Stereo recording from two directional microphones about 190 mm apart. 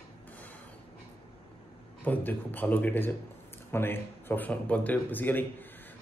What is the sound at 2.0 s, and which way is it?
A man's voice, 10° left (ahead or behind).